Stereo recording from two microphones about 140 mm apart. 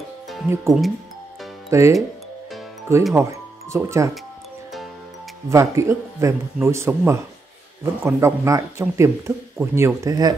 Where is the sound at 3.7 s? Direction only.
20° right (ahead or behind).